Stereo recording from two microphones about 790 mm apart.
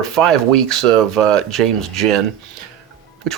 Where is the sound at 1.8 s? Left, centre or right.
Centre.